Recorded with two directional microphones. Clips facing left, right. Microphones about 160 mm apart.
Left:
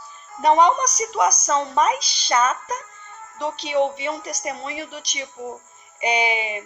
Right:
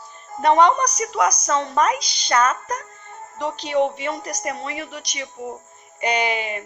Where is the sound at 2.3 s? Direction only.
10° left (ahead or behind).